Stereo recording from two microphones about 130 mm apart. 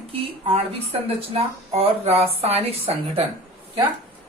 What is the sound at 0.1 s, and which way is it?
Speech, 50° right (ahead or behind).